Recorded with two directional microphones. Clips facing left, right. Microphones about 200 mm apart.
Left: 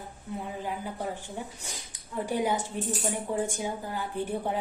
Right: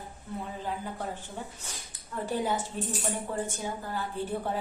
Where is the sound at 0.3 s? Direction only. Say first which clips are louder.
Left 1 dB; 10° left (ahead or behind).